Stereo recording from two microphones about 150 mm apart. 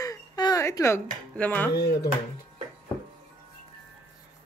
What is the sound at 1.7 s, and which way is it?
Speech, 90° left.